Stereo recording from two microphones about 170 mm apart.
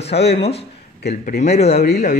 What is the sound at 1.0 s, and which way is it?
Speech, 70° left (ahead or behind).